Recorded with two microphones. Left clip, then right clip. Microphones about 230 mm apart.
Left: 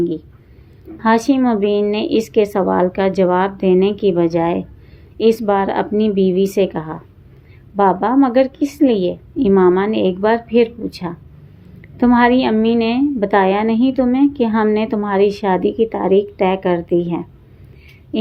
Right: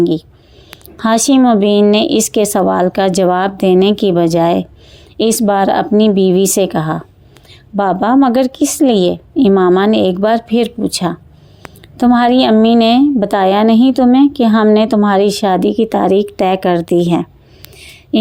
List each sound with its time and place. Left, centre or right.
0.0 s a woman's voice: right